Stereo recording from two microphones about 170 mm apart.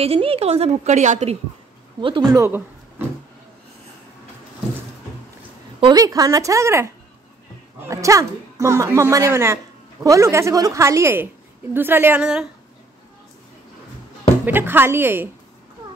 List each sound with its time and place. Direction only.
0.0 s a woman's voice: 35° right (ahead or behind)
2.0 s speech: 30° right (ahead or behind)
5.8 s a woman's voice: 25° right (ahead or behind); by 12.4 s 5° right (ahead or behind)
14.4 s a woman's voice: 10° right (ahead or behind)